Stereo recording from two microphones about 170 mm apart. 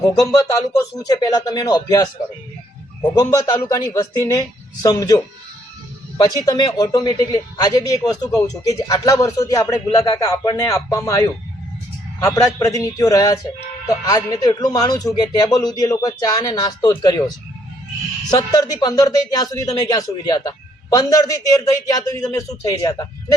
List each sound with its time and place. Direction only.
0.0 s speech: 20° left (ahead or behind)